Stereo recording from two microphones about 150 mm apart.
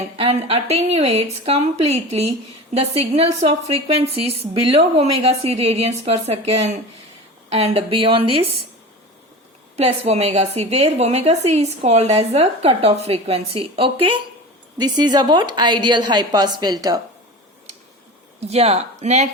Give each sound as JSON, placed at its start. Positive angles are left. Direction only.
{"t": 0.2, "sound": "a woman's voice", "side_deg": -40}
{"t": 9.7, "sound": "a woman's voice", "side_deg": -45}
{"t": 18.3, "sound": "a woman's voice", "side_deg": -45}